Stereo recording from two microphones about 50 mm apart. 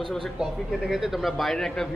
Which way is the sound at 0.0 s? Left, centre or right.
Centre.